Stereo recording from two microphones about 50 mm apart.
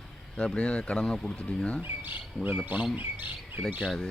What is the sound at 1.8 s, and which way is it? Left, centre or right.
Speech, right.